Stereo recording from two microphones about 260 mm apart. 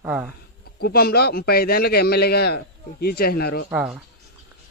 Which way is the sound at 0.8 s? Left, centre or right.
Left.